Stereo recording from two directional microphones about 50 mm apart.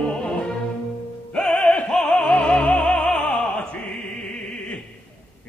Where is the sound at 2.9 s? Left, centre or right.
Centre.